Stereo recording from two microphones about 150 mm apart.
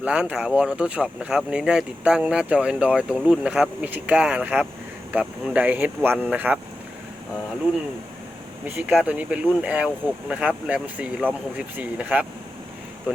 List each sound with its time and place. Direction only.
0.0 s speech: 5° right (ahead or behind)
8.6 s speech: 10° right (ahead or behind)